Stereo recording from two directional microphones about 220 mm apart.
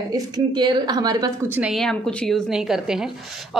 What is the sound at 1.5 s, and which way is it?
A man's voice, centre (ahead or behind).